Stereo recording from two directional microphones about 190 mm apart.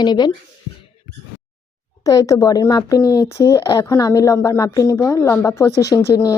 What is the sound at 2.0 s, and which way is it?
Speech, 15° left (ahead or behind).